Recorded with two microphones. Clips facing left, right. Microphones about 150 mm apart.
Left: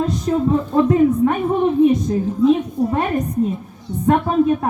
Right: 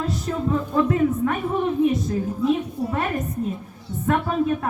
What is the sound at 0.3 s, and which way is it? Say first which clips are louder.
Speech: left 7 dB; 35° left (ahead or behind).